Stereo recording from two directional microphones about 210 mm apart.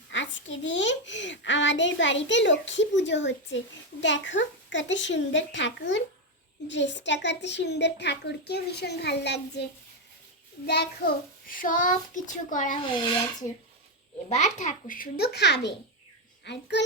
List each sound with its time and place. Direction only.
0.1 s a child's voice: 60° left (ahead or behind)
10.7 s a child's voice: 50° left (ahead or behind)
14.3 s a child's voice: 35° left (ahead or behind); by 16.8 s 55° left (ahead or behind)